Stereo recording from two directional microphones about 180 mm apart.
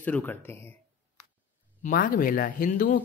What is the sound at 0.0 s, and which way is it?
Speech, 10° left (ahead or behind).